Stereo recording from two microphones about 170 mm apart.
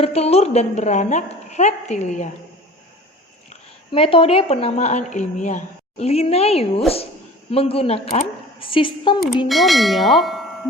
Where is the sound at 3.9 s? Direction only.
30° left (ahead or behind).